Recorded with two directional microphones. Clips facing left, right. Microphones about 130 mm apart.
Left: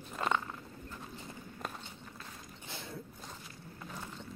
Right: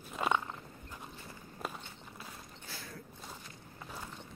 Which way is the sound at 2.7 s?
25° left (ahead or behind).